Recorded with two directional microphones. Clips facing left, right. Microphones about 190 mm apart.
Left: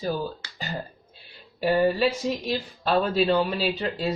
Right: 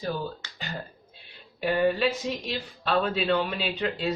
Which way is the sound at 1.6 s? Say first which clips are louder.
Left 2 dB; 35° left (ahead or behind).